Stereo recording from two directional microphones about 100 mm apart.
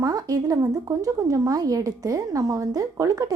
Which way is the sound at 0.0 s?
35° right (ahead or behind).